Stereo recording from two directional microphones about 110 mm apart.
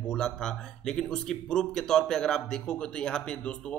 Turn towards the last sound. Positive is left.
turn(degrees=10)  # may be behind; listen again after turning